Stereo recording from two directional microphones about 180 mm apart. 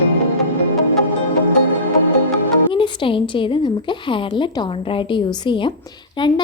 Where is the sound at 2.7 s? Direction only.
25° left (ahead or behind).